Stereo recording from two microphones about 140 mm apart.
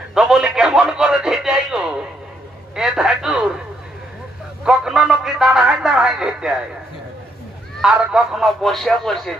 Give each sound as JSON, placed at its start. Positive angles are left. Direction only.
{"t": 0.1, "sound": "a sound", "side_deg": -5}
{"t": 2.7, "sound": "a man's voice", "side_deg": -5}
{"t": 4.6, "sound": "a man's voice", "side_deg": -5}
{"t": 7.8, "sound": "speech", "side_deg": -5}